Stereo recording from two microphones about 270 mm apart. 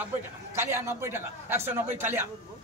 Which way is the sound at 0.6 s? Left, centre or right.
Centre.